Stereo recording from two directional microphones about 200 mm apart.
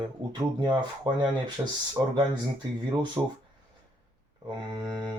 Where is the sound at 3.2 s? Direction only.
20° right (ahead or behind).